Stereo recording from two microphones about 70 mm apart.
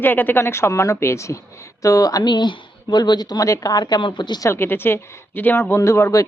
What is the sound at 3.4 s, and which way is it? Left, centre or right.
Speech, left.